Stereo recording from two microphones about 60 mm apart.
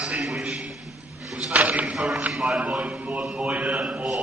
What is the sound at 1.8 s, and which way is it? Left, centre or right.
Speech, centre.